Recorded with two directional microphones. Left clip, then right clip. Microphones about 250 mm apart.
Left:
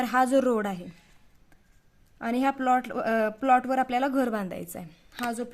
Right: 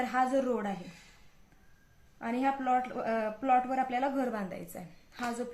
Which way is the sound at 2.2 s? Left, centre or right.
Left.